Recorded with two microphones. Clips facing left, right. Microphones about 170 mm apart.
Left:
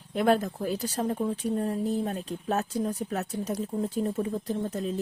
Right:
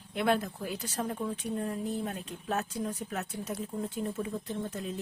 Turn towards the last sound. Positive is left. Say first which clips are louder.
# left 6 dB
turn(degrees=35)  # may be behind; listen again after turning